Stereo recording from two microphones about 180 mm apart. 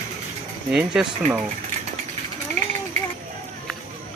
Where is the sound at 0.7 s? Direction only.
5° right (ahead or behind).